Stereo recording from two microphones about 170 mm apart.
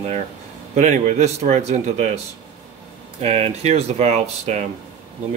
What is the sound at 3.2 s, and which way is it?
Speech, 40° right (ahead or behind).